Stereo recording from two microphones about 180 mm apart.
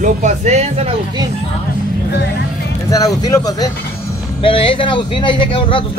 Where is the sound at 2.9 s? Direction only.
20° left (ahead or behind).